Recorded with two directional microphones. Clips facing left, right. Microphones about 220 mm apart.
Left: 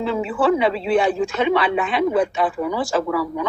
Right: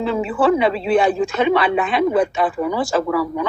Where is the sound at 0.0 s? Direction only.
45° right (ahead or behind).